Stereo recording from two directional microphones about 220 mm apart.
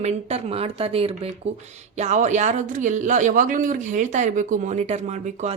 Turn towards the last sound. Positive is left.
turn(degrees=-30)  # may be behind; listen again after turning